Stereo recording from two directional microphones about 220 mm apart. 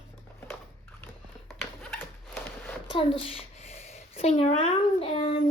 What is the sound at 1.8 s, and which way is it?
Zipper, 10° left (ahead or behind).